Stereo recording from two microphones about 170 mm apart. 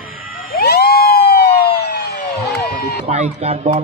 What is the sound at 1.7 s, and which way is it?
Emergency vehicle, 75° left (ahead or behind).